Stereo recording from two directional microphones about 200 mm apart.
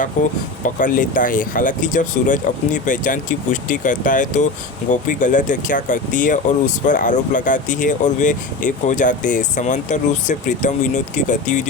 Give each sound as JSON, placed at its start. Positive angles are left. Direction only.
{"t": 0.2, "sound": "speech", "side_deg": 40}